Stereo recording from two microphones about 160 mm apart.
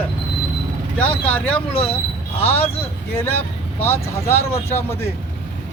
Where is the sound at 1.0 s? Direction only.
10° left (ahead or behind).